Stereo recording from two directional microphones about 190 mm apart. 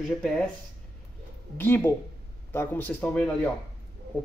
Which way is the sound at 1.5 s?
10° left (ahead or behind).